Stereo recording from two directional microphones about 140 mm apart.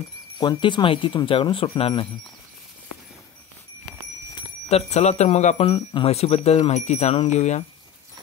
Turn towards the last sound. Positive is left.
turn(degrees=55)  # may be behind; listen again after turning